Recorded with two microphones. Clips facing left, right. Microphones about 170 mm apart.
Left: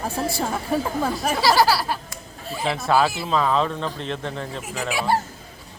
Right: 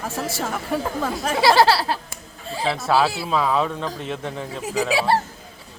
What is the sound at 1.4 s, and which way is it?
Speech, 25° right (ahead or behind).